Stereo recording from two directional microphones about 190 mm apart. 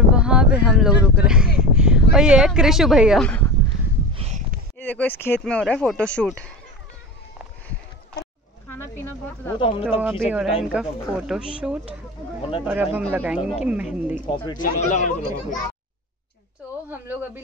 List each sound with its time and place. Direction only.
0.1 s a sound: 5° right (ahead or behind)
0.6 s speech: 5° right (ahead or behind)
1.6 s a sound: 5° right (ahead or behind)
2.1 s speech: 5° right (ahead or behind)
3.3 s a sound: 10° left (ahead or behind)
4.1 s a sound: 35° right (ahead or behind)
4.7 s speech: 10° left (ahead or behind)
9.6 s speech: 30° left (ahead or behind)
9.8 s speech: 5° right (ahead or behind)
12.4 s speech: 30° left (ahead or behind)
12.6 s speech: 10° right (ahead or behind)
14.2 s speech: 25° left (ahead or behind)
14.6 s speech: 40° left (ahead or behind)
17.1 s speech: 10° right (ahead or behind)